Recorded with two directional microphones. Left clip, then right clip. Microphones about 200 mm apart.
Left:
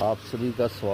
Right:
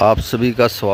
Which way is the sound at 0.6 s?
25° right (ahead or behind).